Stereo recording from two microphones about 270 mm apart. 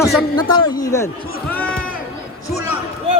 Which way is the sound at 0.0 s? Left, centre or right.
Centre.